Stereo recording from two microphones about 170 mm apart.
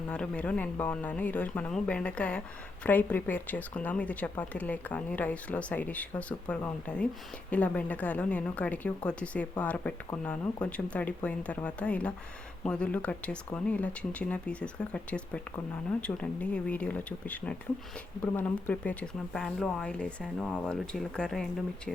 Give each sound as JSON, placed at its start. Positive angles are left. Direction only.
{"t": 0.1, "sound": "speech", "side_deg": 5}